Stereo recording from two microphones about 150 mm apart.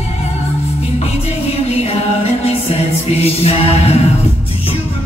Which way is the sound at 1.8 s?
40° left (ahead or behind).